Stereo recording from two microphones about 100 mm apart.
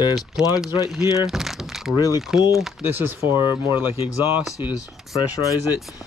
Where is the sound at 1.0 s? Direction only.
35° left (ahead or behind).